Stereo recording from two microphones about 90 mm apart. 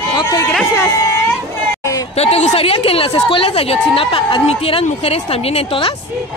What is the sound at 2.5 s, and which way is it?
A woman's voice, 90° left.